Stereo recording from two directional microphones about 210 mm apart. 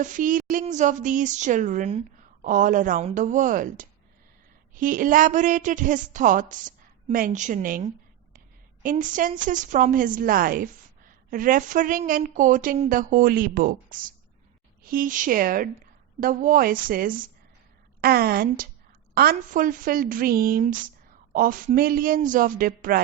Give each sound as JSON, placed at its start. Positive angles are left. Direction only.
{"t": 0.0, "sound": "a woman's voice", "side_deg": -40}